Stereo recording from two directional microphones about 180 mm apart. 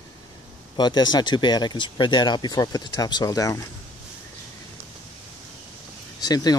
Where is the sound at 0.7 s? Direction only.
25° left (ahead or behind).